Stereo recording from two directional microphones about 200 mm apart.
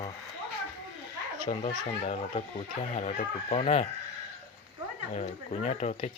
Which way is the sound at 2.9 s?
30° left (ahead or behind).